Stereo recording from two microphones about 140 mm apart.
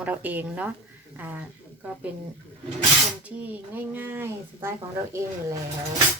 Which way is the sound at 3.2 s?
10° right (ahead or behind).